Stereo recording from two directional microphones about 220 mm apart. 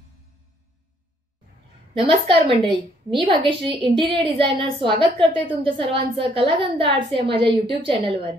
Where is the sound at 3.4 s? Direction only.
20° right (ahead or behind).